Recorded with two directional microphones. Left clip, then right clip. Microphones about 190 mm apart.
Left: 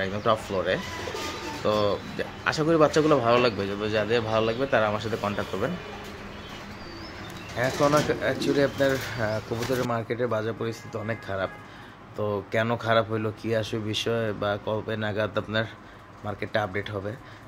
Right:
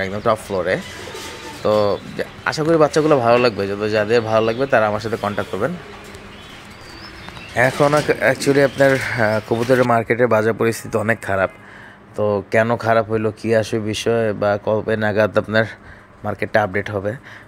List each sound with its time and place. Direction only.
0.0 s speech: 25° right (ahead or behind)
7.5 s speech: 35° right (ahead or behind)
12.2 s speech: 30° right (ahead or behind)